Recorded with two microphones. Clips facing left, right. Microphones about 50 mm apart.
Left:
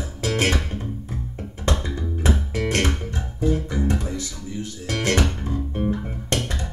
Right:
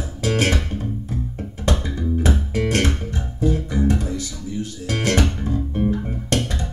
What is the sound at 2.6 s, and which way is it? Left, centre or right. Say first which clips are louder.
Music: right 1 dB; left.